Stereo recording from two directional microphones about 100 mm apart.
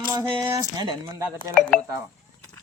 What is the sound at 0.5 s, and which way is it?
Speech, 40° right (ahead or behind).